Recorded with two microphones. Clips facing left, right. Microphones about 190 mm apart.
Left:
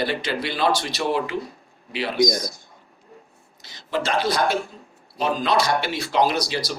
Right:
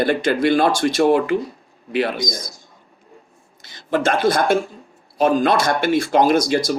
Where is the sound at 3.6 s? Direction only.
50° right (ahead or behind).